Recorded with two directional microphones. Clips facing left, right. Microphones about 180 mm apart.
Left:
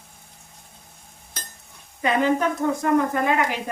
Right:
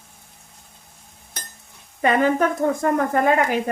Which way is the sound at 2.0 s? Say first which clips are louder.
Right 3 dB; 50° right (ahead or behind).